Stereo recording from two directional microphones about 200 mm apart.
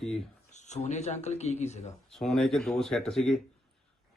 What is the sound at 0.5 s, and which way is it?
Speech, 35° left (ahead or behind).